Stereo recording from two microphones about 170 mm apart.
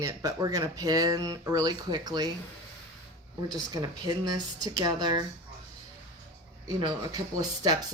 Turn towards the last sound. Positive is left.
turn(degrees=-25)  # may be behind; listen again after turning